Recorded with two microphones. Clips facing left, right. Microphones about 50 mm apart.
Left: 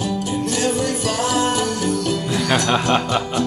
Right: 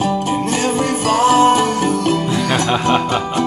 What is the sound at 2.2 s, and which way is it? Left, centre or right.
Jingle bell, centre.